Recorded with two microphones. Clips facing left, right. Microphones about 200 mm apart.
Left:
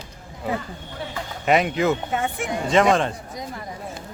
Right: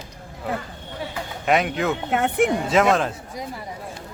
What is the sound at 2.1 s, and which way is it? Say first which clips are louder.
Speech: right 6 dB; 65° right (ahead or behind).